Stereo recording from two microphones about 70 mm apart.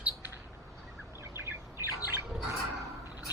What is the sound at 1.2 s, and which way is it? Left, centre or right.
Bird, right.